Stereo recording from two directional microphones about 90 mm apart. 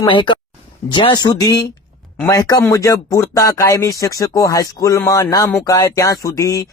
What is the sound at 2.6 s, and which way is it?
Speech, 35° left (ahead or behind).